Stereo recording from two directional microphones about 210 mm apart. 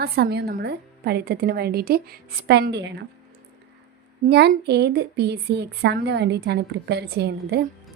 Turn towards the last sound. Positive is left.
turn(degrees=-50)  # may be behind; listen again after turning